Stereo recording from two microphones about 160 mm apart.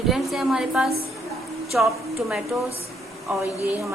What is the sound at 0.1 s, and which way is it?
A woman's voice, centre (ahead or behind).